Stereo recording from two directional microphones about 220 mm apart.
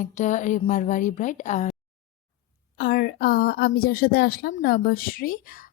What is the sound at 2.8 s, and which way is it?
A woman's voice, 40° left (ahead or behind).